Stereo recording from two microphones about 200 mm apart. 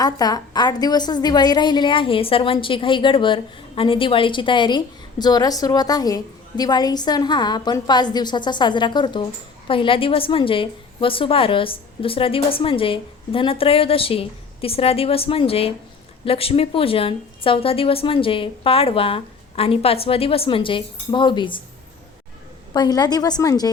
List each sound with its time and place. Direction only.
0.0 s a woman's voice: 20° left (ahead or behind)
22.7 s a woman's voice: 20° left (ahead or behind)